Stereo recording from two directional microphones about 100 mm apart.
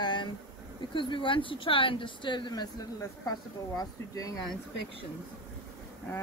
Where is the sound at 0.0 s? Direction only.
50° left (ahead or behind).